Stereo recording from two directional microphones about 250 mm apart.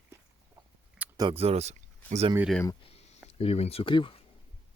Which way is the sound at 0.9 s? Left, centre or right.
Centre.